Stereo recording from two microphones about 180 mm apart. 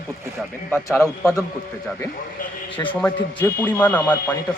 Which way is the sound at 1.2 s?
15° left (ahead or behind).